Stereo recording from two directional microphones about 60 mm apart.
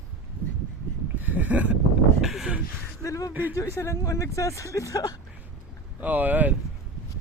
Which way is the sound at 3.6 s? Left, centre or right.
Left.